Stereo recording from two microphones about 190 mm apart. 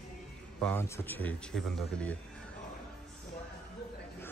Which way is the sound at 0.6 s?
10° left (ahead or behind).